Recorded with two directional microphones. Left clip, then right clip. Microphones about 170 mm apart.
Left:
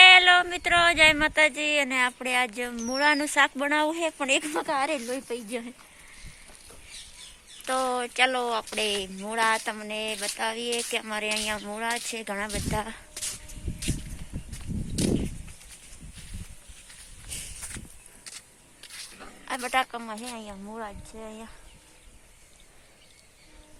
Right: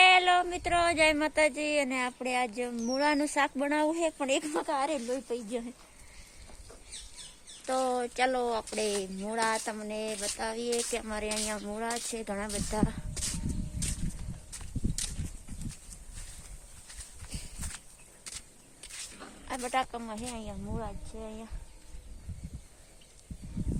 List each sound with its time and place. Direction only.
0.0 s a sound: centre (ahead or behind)
2.9 s speech: centre (ahead or behind)
4.4 s speech: 30° left (ahead or behind)
5.5 s speech: 15° left (ahead or behind)
7.6 s speech: centre (ahead or behind)
17.2 s clip-clop: centre (ahead or behind)
18.8 s a sound: centre (ahead or behind)
19.5 s speech: 10° left (ahead or behind)